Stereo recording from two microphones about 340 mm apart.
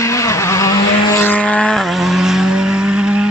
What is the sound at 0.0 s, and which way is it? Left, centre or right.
Vehicle, centre.